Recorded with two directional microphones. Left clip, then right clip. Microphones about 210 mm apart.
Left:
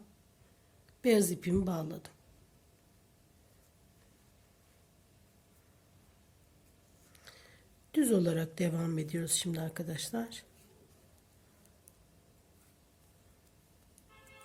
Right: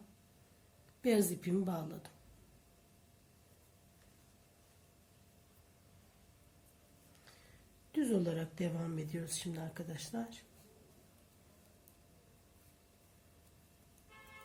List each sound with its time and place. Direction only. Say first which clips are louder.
1.0 s a woman's voice: left 5 dB; 35° left (ahead or behind)
7.3 s a sound: left 7 dB; 45° left (ahead or behind)
7.9 s speech: left 6 dB; 50° left (ahead or behind)